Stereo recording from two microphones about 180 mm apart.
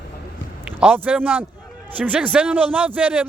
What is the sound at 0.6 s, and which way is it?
A man's voice, 10° right (ahead or behind).